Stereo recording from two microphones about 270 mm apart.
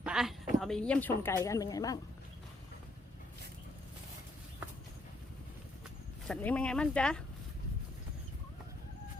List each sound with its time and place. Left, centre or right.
0.0 s speech: centre
6.2 s speech: centre